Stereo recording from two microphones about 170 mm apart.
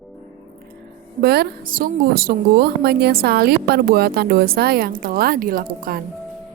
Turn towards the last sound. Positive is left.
turn(degrees=-55)  # may be behind; listen again after turning